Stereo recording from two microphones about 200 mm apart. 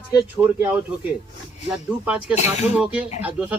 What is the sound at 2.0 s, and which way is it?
Speech, 5° right (ahead or behind).